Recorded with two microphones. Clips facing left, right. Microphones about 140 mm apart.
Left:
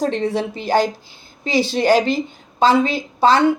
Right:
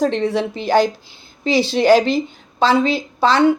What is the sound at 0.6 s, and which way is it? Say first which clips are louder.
A woman's voice: right 2 dB; 45° left (ahead or behind).